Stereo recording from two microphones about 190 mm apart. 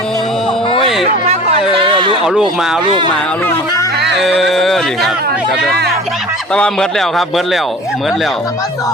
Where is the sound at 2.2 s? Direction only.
5° right (ahead or behind).